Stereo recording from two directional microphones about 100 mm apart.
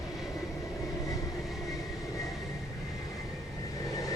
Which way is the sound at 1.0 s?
35° left (ahead or behind).